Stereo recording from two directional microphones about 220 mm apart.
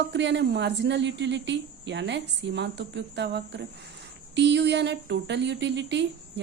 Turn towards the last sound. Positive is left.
turn(degrees=-50)  # may be behind; listen again after turning